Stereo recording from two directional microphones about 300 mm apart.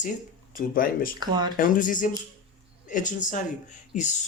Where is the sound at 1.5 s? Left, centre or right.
Left.